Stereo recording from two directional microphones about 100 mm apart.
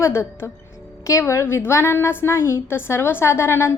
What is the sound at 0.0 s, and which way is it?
A woman's voice, 25° left (ahead or behind).